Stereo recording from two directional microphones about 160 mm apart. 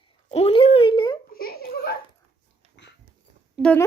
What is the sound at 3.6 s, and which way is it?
Speech, 10° left (ahead or behind).